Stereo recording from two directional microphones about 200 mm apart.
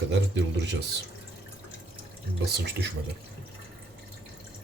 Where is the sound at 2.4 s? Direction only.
55° right (ahead or behind).